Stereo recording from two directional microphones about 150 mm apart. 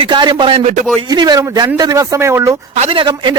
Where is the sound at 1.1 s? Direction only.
25° right (ahead or behind).